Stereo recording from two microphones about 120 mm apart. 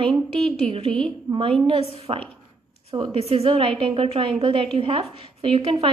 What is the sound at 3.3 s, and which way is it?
A woman's voice, 50° right (ahead or behind).